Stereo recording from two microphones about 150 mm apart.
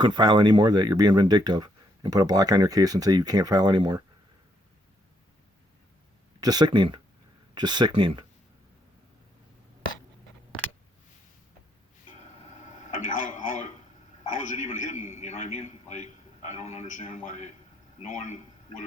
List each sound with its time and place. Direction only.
0.0 s speech: 30° right (ahead or behind)
6.4 s speech: 25° right (ahead or behind)
12.5 s television: 55° left (ahead or behind)
14.3 s a man's voice: 55° left (ahead or behind)